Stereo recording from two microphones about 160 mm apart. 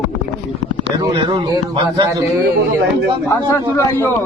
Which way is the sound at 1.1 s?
30° right (ahead or behind).